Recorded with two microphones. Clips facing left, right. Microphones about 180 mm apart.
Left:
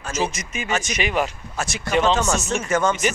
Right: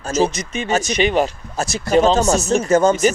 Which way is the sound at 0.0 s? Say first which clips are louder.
Right 7 dB; 35° right (ahead or behind).